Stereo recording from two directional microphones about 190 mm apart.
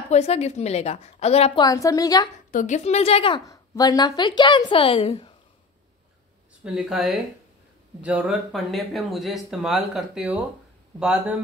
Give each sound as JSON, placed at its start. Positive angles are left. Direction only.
{"t": 0.1, "sound": "a woman's voice", "side_deg": 35}
{"t": 2.5, "sound": "a woman's voice", "side_deg": 40}
{"t": 6.6, "sound": "speech", "side_deg": -5}